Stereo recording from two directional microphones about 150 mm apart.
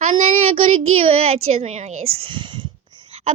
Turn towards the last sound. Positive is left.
turn(degrees=-35)  # may be behind; listen again after turning